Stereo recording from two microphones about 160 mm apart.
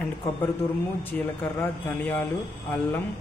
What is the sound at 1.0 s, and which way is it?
Speech, 10° left (ahead or behind).